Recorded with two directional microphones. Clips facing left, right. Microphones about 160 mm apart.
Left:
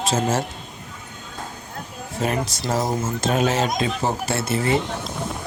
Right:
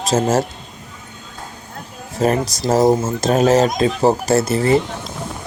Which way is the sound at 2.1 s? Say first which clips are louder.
Right 7 dB; 40° right (ahead or behind).